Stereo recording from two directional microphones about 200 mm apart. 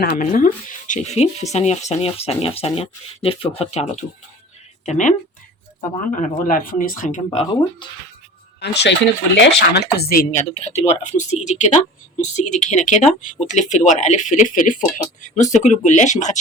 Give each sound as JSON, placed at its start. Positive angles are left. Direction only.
{"t": 0.0, "sound": "speech", "side_deg": 40}
{"t": 6.1, "sound": "speech", "side_deg": 40}
{"t": 8.6, "sound": "speech", "side_deg": 55}
{"t": 10.5, "sound": "speech", "side_deg": 35}